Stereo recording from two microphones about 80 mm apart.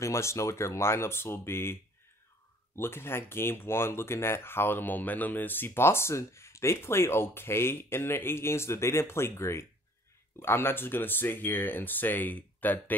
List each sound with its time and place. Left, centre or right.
0.0 s speech: left